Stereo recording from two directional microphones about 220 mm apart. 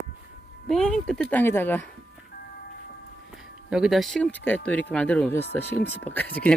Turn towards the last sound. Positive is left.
turn(degrees=10)  # may be behind; listen again after turning